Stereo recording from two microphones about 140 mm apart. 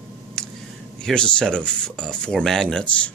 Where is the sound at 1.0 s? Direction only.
5° left (ahead or behind).